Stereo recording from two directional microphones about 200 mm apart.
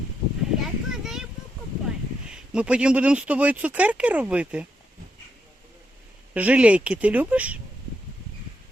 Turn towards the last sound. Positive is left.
turn(degrees=-5)  # may be behind; listen again after turning